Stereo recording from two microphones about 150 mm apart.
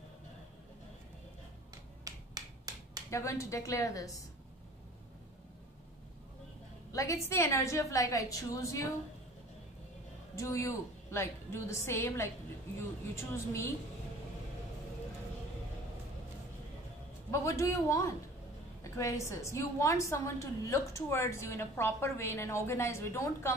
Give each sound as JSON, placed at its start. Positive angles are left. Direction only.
{"t": 2.0, "sound": "finger snapping", "side_deg": -25}
{"t": 3.1, "sound": "a woman's voice", "side_deg": 20}
{"t": 6.9, "sound": "a sound", "side_deg": 20}
{"t": 7.2, "sound": "a woman's voice", "side_deg": 20}
{"t": 10.3, "sound": "a woman's voice", "side_deg": 20}
{"t": 17.3, "sound": "a woman's voice", "side_deg": 20}